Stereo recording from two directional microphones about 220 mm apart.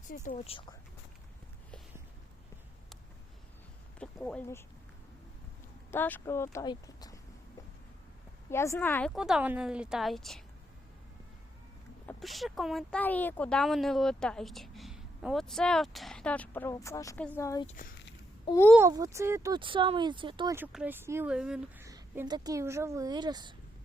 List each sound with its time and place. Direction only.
0.1 s speech: 35° left (ahead or behind)
4.0 s speech: 5° left (ahead or behind)
5.9 s speech: 10° left (ahead or behind)
8.4 s speech: 10° left (ahead or behind)
9.1 s speech: 5° right (ahead or behind)
12.0 s speech: centre (ahead or behind)
18.8 s speech: 15° right (ahead or behind)